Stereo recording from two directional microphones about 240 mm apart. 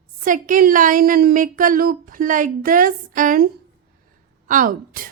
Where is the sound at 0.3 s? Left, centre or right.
Right.